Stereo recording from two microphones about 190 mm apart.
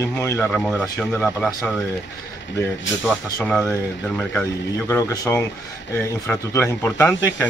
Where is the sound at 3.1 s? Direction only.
5° left (ahead or behind).